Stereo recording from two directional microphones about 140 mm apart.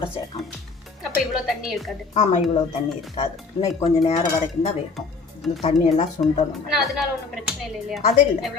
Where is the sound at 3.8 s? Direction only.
40° left (ahead or behind).